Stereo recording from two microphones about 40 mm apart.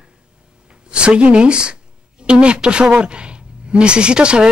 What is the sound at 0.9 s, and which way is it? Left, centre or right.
Speech, right.